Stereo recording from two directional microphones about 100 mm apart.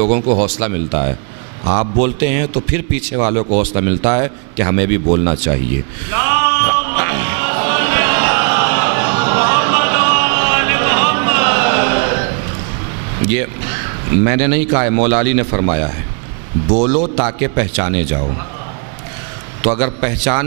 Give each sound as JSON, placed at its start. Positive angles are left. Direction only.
{"t": 0.0, "sound": "a man's voice", "side_deg": -15}
{"t": 6.0, "sound": "music", "side_deg": -15}
{"t": 13.2, "sound": "a man's voice", "side_deg": -15}
{"t": 19.6, "sound": "a man's voice", "side_deg": -15}